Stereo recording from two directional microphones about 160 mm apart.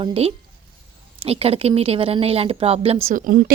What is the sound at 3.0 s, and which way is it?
Speech, 60° right (ahead or behind).